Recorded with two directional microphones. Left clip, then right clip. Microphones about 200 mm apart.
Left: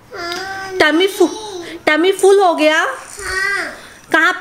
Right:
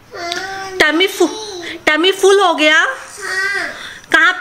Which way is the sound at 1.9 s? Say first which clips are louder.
Even; centre (ahead or behind).